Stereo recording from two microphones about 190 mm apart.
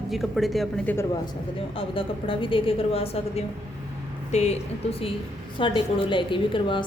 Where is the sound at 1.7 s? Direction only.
30° left (ahead or behind).